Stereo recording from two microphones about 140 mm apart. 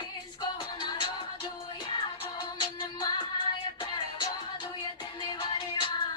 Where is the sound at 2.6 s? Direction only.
35° left (ahead or behind).